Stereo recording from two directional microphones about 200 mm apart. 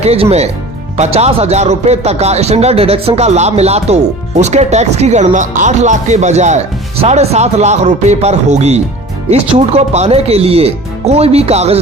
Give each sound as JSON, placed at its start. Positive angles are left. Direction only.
{"t": 0.0, "sound": "speech", "side_deg": -30}